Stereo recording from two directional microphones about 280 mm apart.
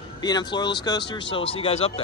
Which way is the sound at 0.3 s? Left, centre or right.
Centre.